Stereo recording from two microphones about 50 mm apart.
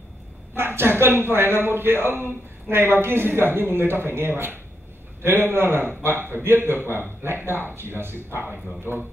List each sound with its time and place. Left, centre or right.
0.6 s a man's voice: right